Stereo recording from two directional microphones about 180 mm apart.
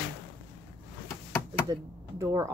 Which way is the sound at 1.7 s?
20° right (ahead or behind).